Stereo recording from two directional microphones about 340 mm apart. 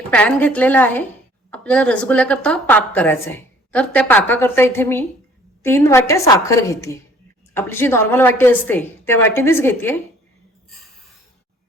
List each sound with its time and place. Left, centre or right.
0.1 s a woman's voice: centre